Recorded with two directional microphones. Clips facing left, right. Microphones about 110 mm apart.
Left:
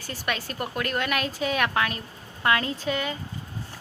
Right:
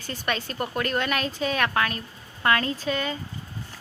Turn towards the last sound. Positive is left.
turn(degrees=15)  # may be behind; listen again after turning